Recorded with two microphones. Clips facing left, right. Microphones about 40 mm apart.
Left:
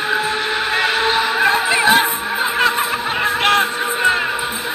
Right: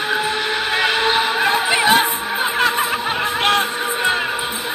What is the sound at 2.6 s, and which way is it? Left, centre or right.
Snicker, left.